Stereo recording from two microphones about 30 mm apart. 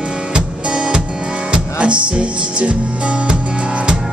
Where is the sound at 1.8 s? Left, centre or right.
Right.